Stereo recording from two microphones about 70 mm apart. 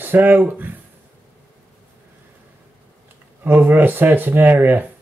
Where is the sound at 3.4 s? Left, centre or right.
Right.